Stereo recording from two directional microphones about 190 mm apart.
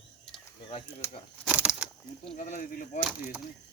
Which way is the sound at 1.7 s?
15° left (ahead or behind).